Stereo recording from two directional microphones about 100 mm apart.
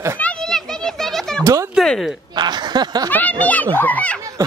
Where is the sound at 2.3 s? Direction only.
45° right (ahead or behind).